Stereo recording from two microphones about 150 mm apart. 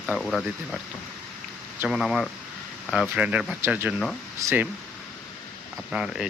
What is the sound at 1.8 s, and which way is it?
Speech, centre (ahead or behind).